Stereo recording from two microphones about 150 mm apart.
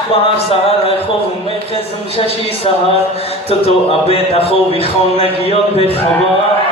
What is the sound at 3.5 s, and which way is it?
Speech, 40° left (ahead or behind).